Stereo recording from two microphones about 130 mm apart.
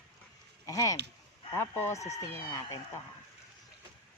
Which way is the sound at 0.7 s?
25° left (ahead or behind).